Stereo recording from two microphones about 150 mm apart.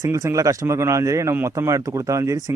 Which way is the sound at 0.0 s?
20° right (ahead or behind).